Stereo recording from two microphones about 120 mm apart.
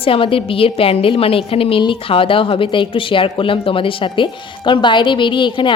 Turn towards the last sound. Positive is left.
turn(degrees=45)  # may be behind; listen again after turning